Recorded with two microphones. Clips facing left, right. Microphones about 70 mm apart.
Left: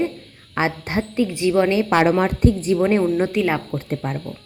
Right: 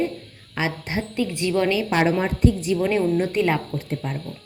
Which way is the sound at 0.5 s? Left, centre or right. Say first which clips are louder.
Left 4 dB; left.